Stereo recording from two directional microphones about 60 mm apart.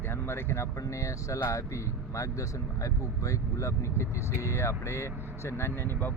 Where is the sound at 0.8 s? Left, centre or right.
Left.